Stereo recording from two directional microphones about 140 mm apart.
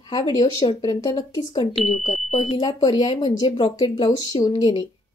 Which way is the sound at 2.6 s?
30° left (ahead or behind).